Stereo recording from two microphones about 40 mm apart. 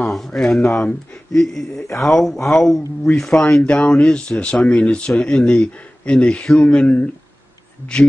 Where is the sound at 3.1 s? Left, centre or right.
Centre.